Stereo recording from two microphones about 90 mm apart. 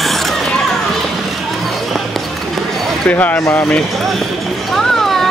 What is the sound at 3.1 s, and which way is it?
Speech, 20° left (ahead or behind).